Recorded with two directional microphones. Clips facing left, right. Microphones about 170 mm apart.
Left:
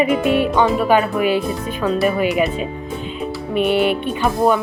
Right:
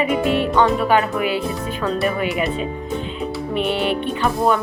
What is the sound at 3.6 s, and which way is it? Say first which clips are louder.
Speech: left 5 dB; 15° left (ahead or behind).